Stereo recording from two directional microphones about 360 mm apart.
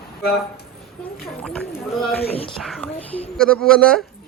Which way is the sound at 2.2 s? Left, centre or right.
Centre.